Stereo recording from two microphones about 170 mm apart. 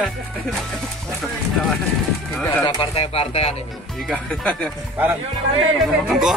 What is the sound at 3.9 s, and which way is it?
Speech, 5° left (ahead or behind).